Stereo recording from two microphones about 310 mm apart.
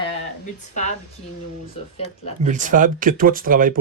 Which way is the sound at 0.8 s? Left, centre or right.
Left.